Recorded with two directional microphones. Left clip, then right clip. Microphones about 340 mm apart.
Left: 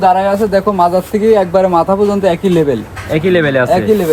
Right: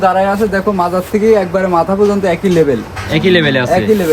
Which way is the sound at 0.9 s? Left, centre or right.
Left.